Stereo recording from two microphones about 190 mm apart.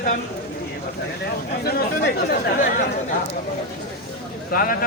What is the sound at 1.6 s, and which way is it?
Speech, 55° left (ahead or behind).